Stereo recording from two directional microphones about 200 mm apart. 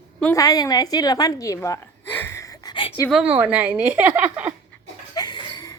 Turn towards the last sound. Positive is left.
turn(degrees=20)  # may be behind; listen again after turning